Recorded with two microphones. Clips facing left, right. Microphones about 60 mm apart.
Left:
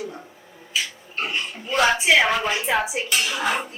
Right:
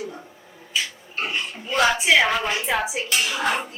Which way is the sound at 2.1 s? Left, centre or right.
Centre.